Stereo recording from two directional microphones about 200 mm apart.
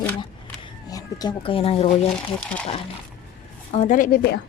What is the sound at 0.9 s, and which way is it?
Speech, 20° left (ahead or behind).